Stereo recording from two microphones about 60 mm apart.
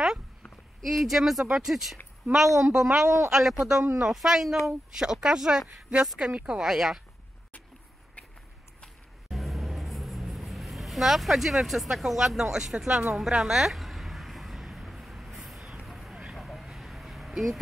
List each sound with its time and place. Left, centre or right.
0.8 s speech: centre
6.6 s speech: centre
8.8 s vehicle: centre
13.1 s a sound: centre
15.8 s vehicle: centre
16.3 s a sound: centre